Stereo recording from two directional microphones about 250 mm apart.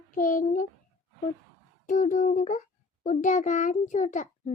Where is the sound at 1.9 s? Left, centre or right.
Left.